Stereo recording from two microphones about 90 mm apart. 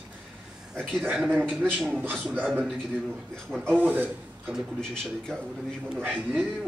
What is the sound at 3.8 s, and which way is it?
Speech, 20° right (ahead or behind).